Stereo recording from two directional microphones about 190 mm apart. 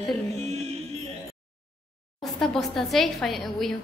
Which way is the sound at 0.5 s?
35° right (ahead or behind).